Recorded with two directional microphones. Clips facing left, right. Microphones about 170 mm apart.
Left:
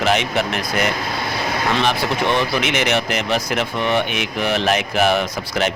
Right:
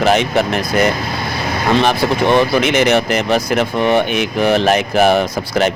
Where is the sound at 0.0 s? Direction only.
40° right (ahead or behind).